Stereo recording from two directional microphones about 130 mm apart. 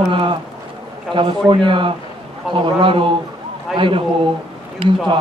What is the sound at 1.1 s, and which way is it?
A man's voice, 40° right (ahead or behind).